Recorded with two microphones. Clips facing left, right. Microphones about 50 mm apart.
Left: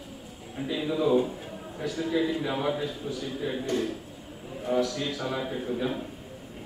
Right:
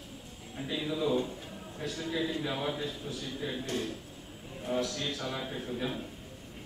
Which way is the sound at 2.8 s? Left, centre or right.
Centre.